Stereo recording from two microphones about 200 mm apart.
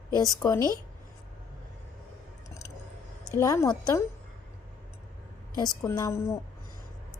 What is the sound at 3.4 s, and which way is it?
Speech, 15° left (ahead or behind).